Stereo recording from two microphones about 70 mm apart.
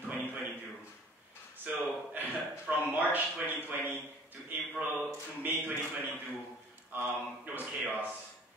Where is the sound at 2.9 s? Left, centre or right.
Right.